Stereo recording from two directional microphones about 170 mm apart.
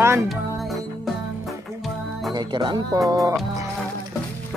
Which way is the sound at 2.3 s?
25° right (ahead or behind).